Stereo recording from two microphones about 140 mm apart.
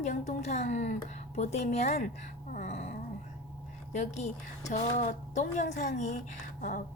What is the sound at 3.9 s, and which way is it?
A woman's voice, 55° left (ahead or behind).